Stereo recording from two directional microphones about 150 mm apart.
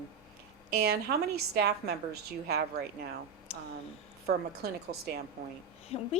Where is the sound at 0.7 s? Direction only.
90° right.